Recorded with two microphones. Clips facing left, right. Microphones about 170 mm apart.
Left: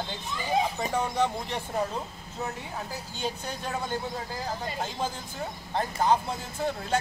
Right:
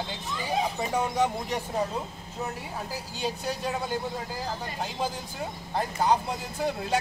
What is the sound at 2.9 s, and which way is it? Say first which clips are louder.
Speech: right 2 dB; 10° right (ahead or behind).